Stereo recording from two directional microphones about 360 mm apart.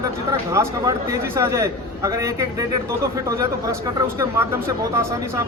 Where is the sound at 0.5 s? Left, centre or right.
Centre.